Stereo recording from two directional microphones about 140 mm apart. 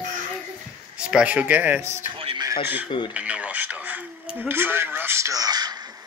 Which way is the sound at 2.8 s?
35° left (ahead or behind).